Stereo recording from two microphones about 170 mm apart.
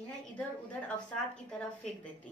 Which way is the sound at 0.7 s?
5° left (ahead or behind).